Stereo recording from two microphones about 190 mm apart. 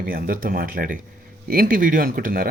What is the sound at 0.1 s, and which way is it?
Speech, 50° right (ahead or behind).